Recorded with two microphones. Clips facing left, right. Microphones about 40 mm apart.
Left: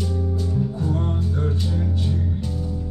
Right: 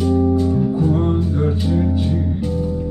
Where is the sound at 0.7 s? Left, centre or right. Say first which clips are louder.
Right 8 dB; right.